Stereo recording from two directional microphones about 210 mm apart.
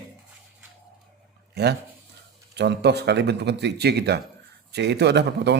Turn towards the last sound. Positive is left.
turn(degrees=-55)  # may be behind; listen again after turning